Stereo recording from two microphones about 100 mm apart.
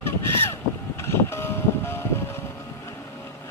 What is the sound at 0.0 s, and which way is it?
Boat, 25° left (ahead or behind).